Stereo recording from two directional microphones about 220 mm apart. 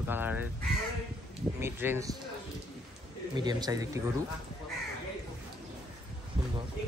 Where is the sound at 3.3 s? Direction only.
20° right (ahead or behind).